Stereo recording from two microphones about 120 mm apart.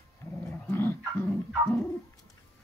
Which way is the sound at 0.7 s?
20° left (ahead or behind).